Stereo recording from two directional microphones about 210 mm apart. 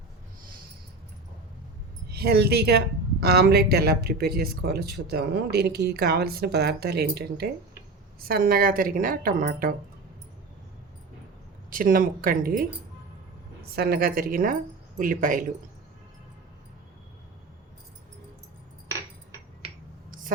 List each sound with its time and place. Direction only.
2.0 s a woman's voice: 50° right (ahead or behind)
11.7 s a woman's voice: 40° right (ahead or behind)